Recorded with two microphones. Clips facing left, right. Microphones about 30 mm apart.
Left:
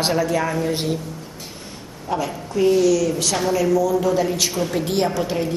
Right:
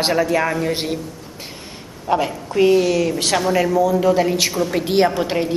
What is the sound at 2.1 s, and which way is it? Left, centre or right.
A woman's voice, right.